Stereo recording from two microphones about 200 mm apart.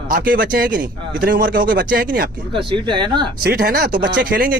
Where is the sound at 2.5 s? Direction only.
25° right (ahead or behind).